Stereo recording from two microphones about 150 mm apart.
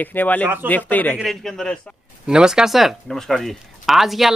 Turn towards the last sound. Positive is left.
turn(degrees=0)  # may be behind; listen again after turning